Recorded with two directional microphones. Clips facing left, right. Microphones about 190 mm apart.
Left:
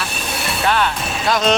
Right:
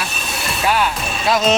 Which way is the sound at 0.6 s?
5° right (ahead or behind).